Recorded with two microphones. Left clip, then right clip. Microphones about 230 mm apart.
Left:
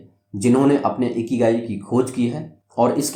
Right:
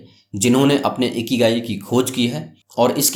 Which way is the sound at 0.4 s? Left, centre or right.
Right.